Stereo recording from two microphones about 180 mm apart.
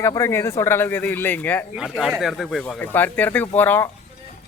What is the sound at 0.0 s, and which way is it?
Speech, 15° left (ahead or behind).